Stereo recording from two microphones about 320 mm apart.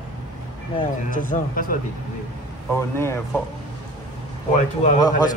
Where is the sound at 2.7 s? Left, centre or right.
Centre.